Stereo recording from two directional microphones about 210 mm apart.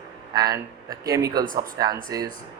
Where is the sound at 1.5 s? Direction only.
40° right (ahead or behind).